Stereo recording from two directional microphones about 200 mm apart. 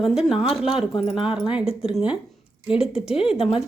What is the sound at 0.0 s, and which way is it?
A woman's voice, centre (ahead or behind).